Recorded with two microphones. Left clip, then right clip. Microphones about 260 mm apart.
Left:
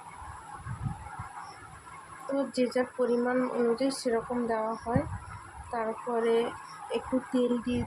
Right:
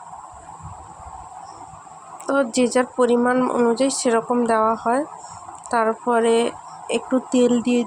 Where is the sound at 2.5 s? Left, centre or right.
Right.